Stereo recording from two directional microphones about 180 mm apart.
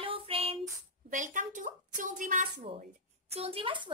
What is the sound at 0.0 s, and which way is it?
Child singing, 30° right (ahead or behind).